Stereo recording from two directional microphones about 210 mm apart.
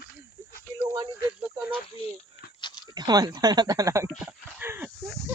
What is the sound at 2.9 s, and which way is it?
Dog, 20° right (ahead or behind).